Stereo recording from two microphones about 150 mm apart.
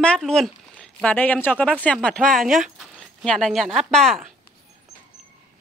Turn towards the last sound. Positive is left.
turn(degrees=0)  # may be behind; listen again after turning